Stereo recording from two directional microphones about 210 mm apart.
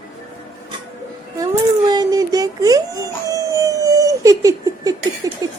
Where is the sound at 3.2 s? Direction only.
15° right (ahead or behind).